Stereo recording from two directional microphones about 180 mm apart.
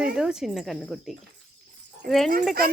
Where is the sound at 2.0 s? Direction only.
55° right (ahead or behind).